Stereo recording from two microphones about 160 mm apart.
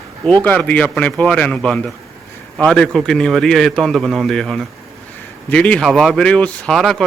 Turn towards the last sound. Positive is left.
turn(degrees=0)  # may be behind; listen again after turning